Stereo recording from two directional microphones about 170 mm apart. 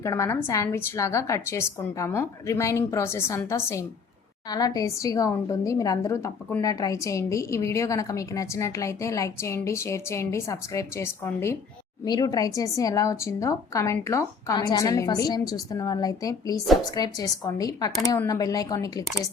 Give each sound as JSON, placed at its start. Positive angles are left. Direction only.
{"t": 0.0, "sound": "a woman's voice", "side_deg": 15}